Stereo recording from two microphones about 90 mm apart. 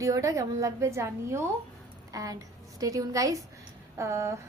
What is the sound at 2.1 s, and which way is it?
A woman's voice, 40° right (ahead or behind).